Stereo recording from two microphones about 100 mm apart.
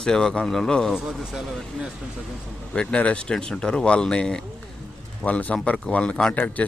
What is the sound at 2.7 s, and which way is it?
A man's voice, 10° left (ahead or behind).